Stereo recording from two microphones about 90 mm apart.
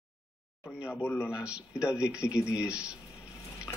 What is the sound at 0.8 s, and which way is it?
Speech, 15° left (ahead or behind).